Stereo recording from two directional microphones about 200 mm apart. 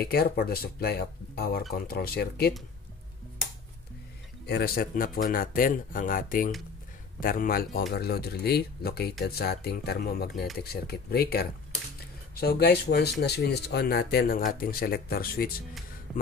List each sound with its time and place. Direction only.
0.0 s speech: 50° left (ahead or behind)
4.5 s speech: 50° left (ahead or behind)
16.1 s a sound: centre (ahead or behind)